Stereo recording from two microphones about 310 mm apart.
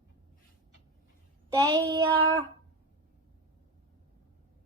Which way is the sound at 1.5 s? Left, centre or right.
Centre.